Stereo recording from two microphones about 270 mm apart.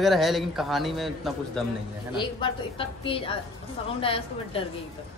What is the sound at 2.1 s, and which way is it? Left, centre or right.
A woman's voice, centre.